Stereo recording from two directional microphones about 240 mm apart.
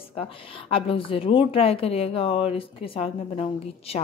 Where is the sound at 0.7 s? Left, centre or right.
Left.